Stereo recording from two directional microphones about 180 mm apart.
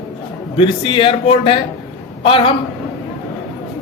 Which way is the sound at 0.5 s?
30° left (ahead or behind).